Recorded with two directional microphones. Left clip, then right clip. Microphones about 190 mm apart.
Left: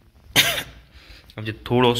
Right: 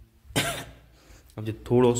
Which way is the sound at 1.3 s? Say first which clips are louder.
Left 2 dB; 5° right (ahead or behind).